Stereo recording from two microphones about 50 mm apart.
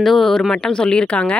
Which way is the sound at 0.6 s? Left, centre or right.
Centre.